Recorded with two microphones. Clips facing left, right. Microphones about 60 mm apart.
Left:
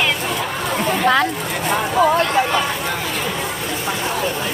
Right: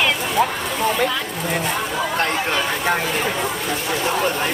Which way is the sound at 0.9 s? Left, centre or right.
Left.